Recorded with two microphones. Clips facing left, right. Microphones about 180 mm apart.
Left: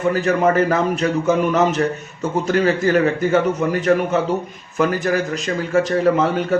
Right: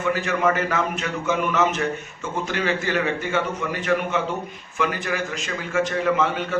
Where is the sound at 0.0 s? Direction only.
35° left (ahead or behind).